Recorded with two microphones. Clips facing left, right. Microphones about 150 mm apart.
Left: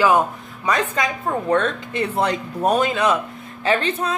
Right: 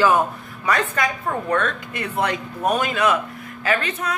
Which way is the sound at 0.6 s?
20° left (ahead or behind).